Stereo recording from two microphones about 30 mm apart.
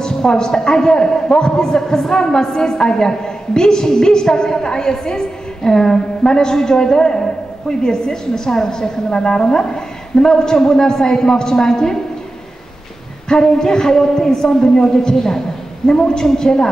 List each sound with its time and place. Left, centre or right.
0.0 s a man's voice: left
13.3 s a man's voice: left